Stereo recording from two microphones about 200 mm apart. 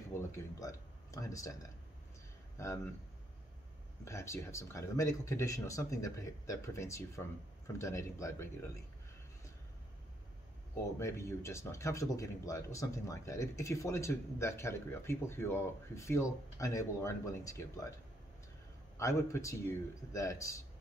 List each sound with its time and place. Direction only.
0.1 s speech: 15° left (ahead or behind)
4.0 s speech: 15° left (ahead or behind)
11.0 s speech: 15° left (ahead or behind)
18.9 s speech: 15° left (ahead or behind)